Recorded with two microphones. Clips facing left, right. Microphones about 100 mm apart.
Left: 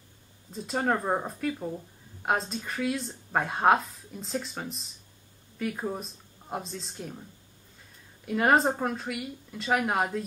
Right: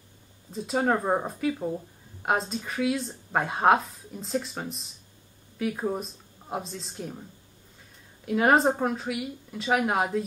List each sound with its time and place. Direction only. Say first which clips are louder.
0.5 s speech: right 3 dB; centre (ahead or behind)
8.3 s speech: right 2 dB; centre (ahead or behind)